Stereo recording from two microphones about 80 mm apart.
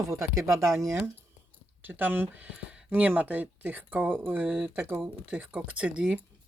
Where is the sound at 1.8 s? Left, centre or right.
Right.